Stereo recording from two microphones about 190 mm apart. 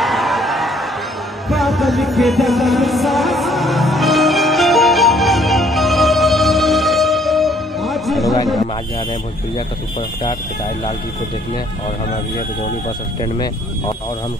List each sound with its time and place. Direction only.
0.0 s a sound: centre (ahead or behind)
1.5 s music: centre (ahead or behind)
13.2 s speech: 20° left (ahead or behind)